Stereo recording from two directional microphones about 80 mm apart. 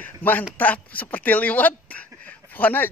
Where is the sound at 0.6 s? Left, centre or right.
Centre.